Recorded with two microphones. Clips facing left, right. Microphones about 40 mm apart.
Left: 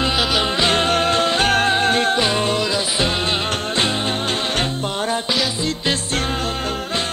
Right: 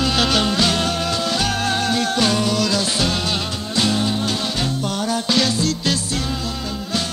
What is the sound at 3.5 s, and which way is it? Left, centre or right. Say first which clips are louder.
Music: left 5 dB; left.